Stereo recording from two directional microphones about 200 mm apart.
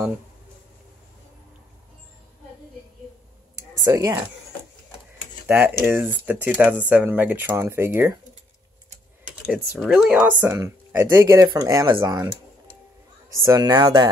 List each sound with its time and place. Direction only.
3.5 s a sound: 15° right (ahead or behind)
5.5 s speech: 5° right (ahead or behind)
9.3 s speech: 5° right (ahead or behind)
13.4 s speech: 20° right (ahead or behind)